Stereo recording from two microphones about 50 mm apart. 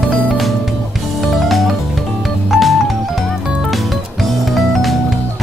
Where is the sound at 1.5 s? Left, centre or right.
Centre.